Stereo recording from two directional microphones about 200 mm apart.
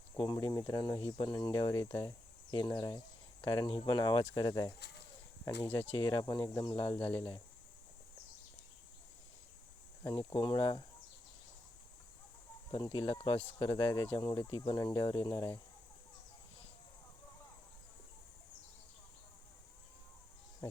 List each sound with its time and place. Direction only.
0.2 s speech: 20° left (ahead or behind)
5.9 s speech: 25° left (ahead or behind)
10.0 s speech: 10° left (ahead or behind)
10.3 s speech: 25° left (ahead or behind)
12.7 s speech: 25° left (ahead or behind)